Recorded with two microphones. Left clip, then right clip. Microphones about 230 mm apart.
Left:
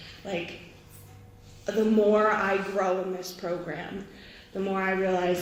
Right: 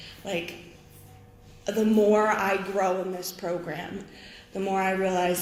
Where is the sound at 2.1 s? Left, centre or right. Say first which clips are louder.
Even; right.